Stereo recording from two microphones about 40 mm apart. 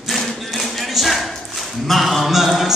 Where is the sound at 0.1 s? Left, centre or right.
Centre.